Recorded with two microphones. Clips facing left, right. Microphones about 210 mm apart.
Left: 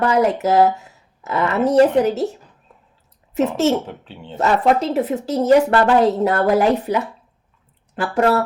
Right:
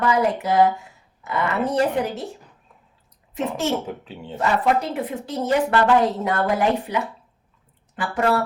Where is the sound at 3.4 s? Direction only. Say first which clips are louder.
Left 7 dB; 40° left (ahead or behind).